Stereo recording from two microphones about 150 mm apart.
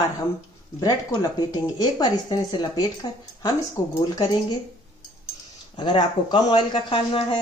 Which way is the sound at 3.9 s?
25° left (ahead or behind).